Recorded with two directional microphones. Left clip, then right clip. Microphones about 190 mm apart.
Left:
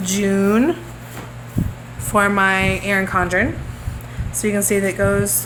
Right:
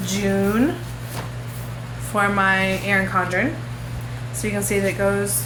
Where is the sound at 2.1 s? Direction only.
50° left (ahead or behind).